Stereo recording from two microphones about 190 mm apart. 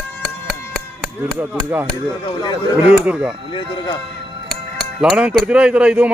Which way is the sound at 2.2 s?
25° left (ahead or behind).